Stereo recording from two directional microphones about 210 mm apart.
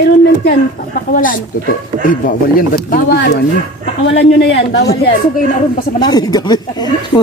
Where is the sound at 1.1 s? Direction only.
40° left (ahead or behind); by 4.8 s 55° left (ahead or behind).